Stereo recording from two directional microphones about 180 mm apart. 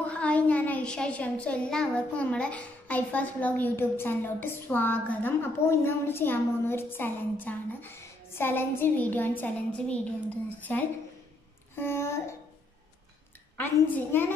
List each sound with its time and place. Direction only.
0.1 s a child's voice: 5° left (ahead or behind)
11.7 s a sound: 15° left (ahead or behind)
13.6 s a child's voice: 10° left (ahead or behind)